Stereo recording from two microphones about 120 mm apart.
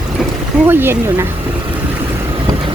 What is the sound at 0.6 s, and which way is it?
Speech, 15° right (ahead or behind).